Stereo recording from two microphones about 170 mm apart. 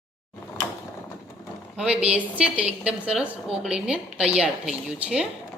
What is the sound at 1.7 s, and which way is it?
A woman's voice, 5° right (ahead or behind).